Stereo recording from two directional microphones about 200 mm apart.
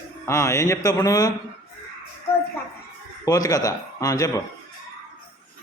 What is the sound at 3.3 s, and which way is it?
A man's voice, 15° left (ahead or behind).